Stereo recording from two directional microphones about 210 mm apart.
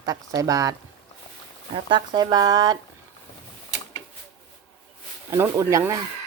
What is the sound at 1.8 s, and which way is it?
Stir, 20° right (ahead or behind).